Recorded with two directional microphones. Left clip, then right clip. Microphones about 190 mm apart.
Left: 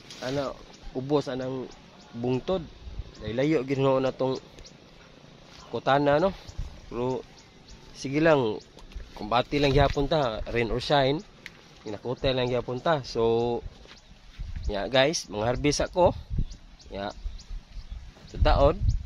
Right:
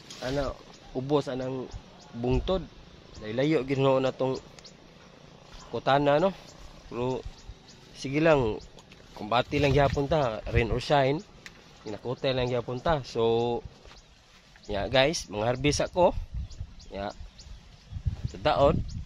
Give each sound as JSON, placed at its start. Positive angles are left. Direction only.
{"t": 0.2, "sound": "a man's voice", "side_deg": -10}
{"t": 5.7, "sound": "a man's voice", "side_deg": -5}
{"t": 14.7, "sound": "speech", "side_deg": -5}
{"t": 18.4, "sound": "a man's voice", "side_deg": -5}